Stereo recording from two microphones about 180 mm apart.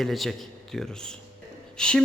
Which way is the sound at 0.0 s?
Centre (ahead or behind).